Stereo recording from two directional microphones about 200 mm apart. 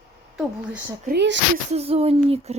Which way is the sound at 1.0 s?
60° right (ahead or behind).